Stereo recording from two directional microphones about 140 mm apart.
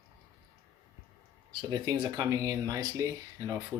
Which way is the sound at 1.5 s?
35° right (ahead or behind).